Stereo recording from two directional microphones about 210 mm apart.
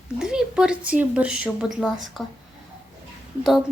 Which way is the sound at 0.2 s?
5° right (ahead or behind).